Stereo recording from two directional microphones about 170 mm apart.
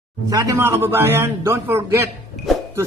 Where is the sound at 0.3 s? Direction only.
20° right (ahead or behind).